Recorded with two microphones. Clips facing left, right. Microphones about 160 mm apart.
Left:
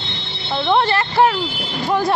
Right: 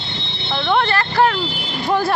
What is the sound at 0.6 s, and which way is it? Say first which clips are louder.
Speech: left 1 dB; 25° left (ahead or behind).